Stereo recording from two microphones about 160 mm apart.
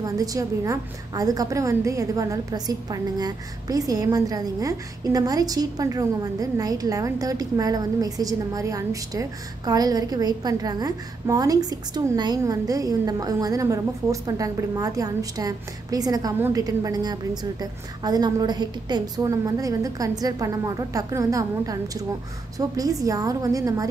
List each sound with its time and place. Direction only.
0.0 s a woman's voice: 20° right (ahead or behind)